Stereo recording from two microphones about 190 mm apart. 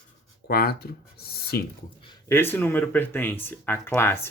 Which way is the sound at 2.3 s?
10° left (ahead or behind).